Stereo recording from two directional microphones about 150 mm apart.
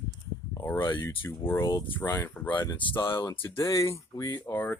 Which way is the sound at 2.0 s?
15° left (ahead or behind).